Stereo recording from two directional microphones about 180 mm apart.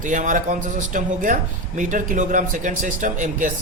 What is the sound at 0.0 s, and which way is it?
Speech, 45° right (ahead or behind).